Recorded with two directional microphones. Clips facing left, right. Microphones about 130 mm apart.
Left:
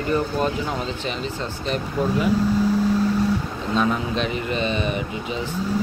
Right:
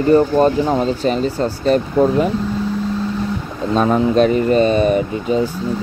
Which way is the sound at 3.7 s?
40° right (ahead or behind).